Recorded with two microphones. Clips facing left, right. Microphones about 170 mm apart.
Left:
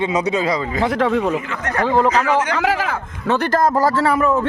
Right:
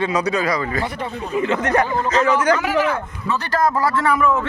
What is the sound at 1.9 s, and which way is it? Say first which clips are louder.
Speech: left 6 dB; 90° left.